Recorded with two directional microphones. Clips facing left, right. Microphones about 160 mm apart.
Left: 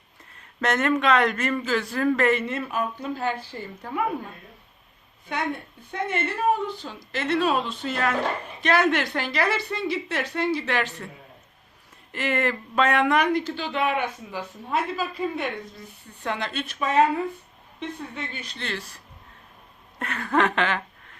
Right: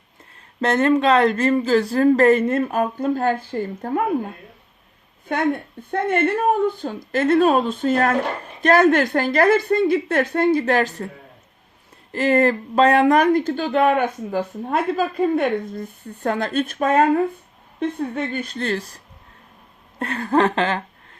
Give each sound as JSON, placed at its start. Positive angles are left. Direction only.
{"t": 0.6, "sound": "speech", "side_deg": -30}
{"t": 5.3, "sound": "speech", "side_deg": -50}
{"t": 12.1, "sound": "speech", "side_deg": -35}
{"t": 20.0, "sound": "speech", "side_deg": -35}